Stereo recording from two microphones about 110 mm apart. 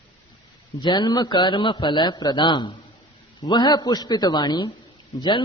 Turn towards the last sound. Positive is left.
turn(degrees=45)  # may be behind; listen again after turning